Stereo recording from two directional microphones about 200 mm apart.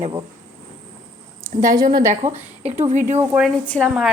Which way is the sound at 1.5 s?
15° right (ahead or behind).